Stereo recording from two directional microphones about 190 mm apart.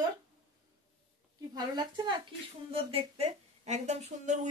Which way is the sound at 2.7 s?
30° right (ahead or behind).